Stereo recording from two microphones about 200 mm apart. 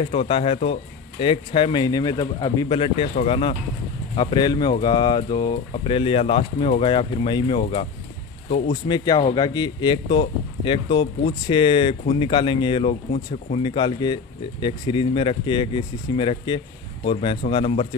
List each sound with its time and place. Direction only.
0.0 s speech: 30° left (ahead or behind)
7.6 s speech: 35° left (ahead or behind)
8.8 s speech: 20° left (ahead or behind)